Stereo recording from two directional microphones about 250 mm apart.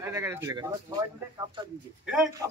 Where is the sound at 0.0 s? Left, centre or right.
Centre.